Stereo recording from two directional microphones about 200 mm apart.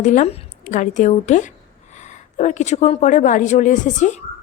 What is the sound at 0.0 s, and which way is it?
A woman's voice, 40° left (ahead or behind).